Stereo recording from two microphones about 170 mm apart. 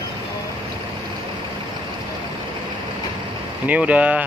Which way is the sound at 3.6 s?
10° right (ahead or behind).